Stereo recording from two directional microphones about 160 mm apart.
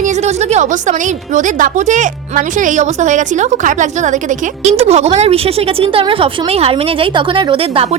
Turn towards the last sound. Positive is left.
turn(degrees=-30)  # may be behind; listen again after turning